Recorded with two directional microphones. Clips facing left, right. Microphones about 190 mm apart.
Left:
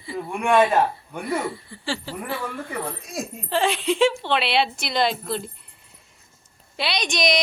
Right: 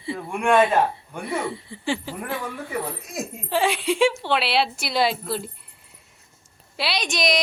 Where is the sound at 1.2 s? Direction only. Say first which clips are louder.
Left 1 dB; 25° right (ahead or behind); by 5.5 s 5° right (ahead or behind).